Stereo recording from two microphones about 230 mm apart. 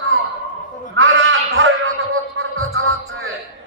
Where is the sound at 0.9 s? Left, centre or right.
Right.